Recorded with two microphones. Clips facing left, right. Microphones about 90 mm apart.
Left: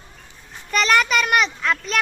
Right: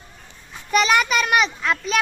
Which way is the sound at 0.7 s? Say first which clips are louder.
Even; 5° right (ahead or behind).